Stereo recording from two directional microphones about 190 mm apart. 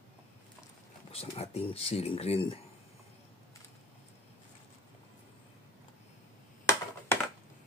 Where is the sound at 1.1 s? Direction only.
30° left (ahead or behind).